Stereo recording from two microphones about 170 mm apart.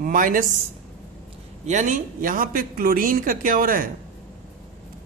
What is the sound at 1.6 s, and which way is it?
A man's voice, 45° right (ahead or behind).